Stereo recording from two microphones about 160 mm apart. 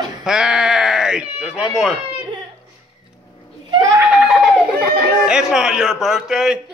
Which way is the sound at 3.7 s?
20° right (ahead or behind).